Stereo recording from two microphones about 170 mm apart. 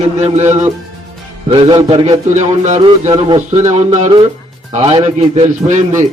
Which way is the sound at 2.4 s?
45° right (ahead or behind).